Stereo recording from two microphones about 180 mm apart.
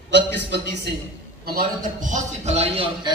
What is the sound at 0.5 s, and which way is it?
Speech, 70° right (ahead or behind).